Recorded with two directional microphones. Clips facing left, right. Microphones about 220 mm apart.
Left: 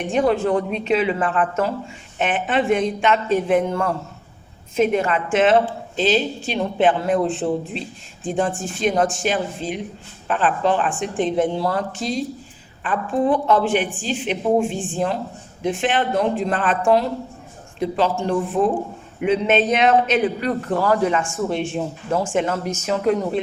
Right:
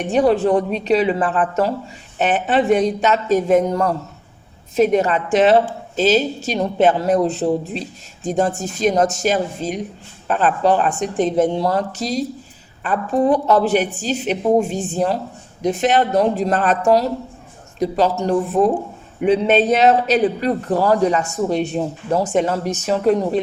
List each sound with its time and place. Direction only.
0.1 s a woman's voice: 35° right (ahead or behind)